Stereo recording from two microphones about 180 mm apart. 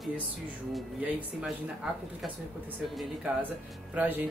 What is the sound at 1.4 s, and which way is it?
A woman's voice, centre (ahead or behind).